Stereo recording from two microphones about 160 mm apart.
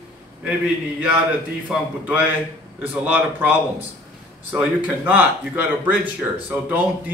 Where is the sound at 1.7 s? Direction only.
5° right (ahead or behind).